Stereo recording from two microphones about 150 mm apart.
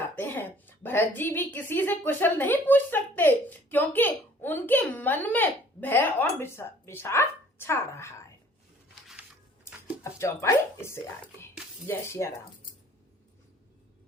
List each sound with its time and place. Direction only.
0.2 s a woman's voice: 10° left (ahead or behind)
9.8 s a woman's voice: 20° left (ahead or behind)